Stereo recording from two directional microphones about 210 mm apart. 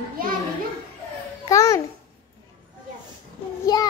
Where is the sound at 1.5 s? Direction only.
15° left (ahead or behind).